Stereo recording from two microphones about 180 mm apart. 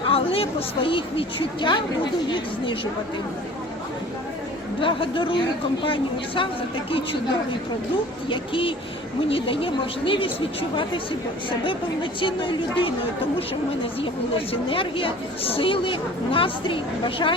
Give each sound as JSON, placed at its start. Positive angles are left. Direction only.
{"t": 0.0, "sound": "a woman's voice", "side_deg": 30}
{"t": 4.8, "sound": "a woman's voice", "side_deg": 30}
{"t": 8.3, "sound": "a woman's voice", "side_deg": 30}
{"t": 12.2, "sound": "a woman's voice", "side_deg": 30}
{"t": 14.0, "sound": "a woman's voice", "side_deg": 30}